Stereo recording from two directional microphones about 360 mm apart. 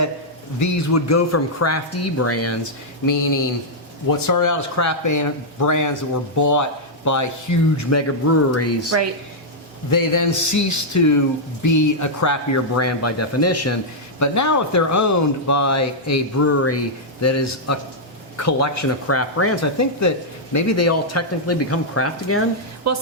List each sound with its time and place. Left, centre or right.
0.6 s speech: left
4.3 s speech: left
9.9 s speech: left
22.8 s speech: right